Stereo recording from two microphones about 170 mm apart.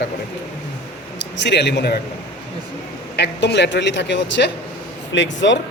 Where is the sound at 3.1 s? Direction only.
80° left.